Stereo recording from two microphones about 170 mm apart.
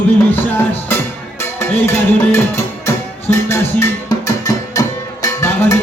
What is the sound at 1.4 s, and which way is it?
Music, 15° left (ahead or behind).